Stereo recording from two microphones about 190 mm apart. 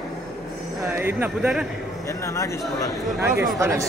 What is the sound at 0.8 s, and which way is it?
Speech, 10° right (ahead or behind).